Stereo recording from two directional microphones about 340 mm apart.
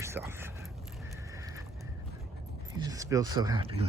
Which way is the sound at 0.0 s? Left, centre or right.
Centre.